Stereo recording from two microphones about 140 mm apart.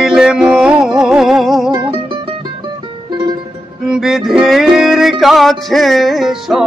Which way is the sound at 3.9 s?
Centre (ahead or behind).